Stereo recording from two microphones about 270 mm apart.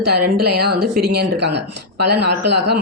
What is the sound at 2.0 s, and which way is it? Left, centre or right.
Speech, right.